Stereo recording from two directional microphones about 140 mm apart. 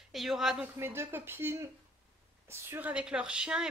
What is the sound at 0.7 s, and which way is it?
A woman's voice, 15° right (ahead or behind).